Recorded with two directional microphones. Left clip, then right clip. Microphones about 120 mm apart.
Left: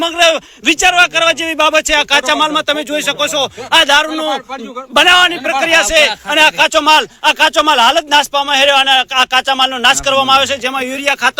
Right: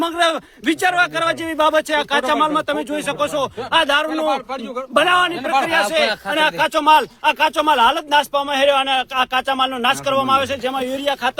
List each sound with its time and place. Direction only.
0.0 s a man's voice: 5° left (ahead or behind)
1.9 s a man's voice: 20° left (ahead or behind)